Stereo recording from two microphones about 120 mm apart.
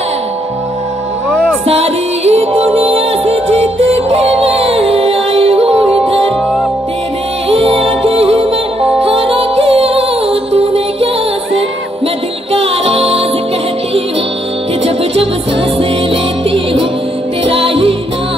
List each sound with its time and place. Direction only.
1.3 s music: 5° left (ahead or behind)
1.7 s music: 60° right (ahead or behind)
7.4 s music: 55° right (ahead or behind)
12.5 s music: 55° right (ahead or behind)
15.8 s music: 50° right (ahead or behind)